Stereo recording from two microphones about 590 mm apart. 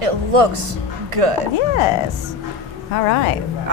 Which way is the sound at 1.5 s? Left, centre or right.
Left.